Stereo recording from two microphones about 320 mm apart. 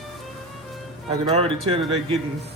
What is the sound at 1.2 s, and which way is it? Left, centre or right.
Speech, centre.